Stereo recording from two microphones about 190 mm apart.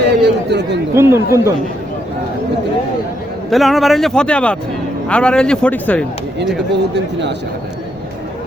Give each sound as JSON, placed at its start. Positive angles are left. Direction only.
{"t": 0.0, "sound": "chatter", "side_deg": -60}
{"t": 0.9, "sound": "speech", "side_deg": -15}
{"t": 3.5, "sound": "speech", "side_deg": 0}
{"t": 6.9, "sound": "speech", "side_deg": -65}